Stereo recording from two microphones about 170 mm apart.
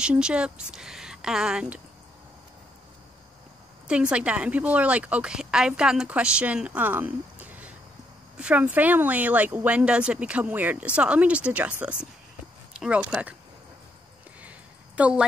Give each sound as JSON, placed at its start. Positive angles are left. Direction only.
{"t": 0.0, "sound": "speech", "side_deg": -5}
{"t": 3.8, "sound": "a woman's voice", "side_deg": -5}
{"t": 12.7, "sound": "a sound", "side_deg": -5}
{"t": 15.0, "sound": "a woman's voice", "side_deg": -5}